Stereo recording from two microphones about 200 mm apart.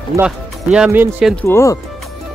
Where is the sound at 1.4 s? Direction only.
15° left (ahead or behind).